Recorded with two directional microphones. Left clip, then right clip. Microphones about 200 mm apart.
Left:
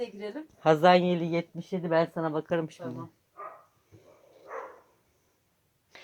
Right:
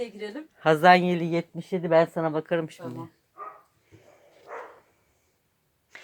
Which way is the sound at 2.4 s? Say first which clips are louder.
Right 3 dB; 5° right (ahead or behind).